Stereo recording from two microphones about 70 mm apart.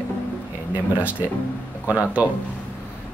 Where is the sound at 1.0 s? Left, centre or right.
Right.